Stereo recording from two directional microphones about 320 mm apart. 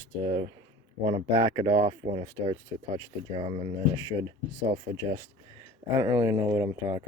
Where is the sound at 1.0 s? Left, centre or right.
Centre.